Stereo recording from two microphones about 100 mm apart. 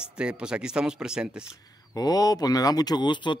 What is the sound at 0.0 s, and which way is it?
Speech, 10° right (ahead or behind).